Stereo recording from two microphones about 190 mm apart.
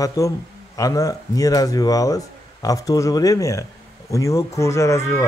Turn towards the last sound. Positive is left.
turn(degrees=15)  # may be behind; listen again after turning